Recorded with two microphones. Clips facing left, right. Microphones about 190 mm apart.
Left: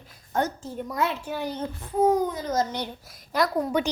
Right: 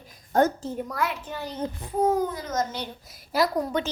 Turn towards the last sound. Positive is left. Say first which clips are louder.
# right 1 dB
turn(degrees=-5)  # may be behind; listen again after turning